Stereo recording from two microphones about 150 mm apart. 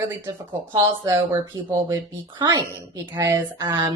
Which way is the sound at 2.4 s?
25° right (ahead or behind).